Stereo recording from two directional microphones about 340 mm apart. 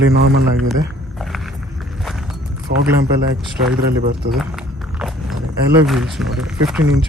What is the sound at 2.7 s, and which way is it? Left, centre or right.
Speech, right.